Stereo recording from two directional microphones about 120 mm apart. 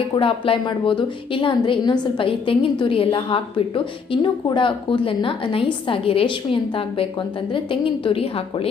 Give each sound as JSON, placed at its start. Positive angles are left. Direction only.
{"t": 0.1, "sound": "a woman's voice", "side_deg": 50}